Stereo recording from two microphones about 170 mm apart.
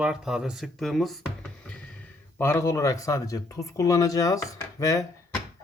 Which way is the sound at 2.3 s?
15° left (ahead or behind).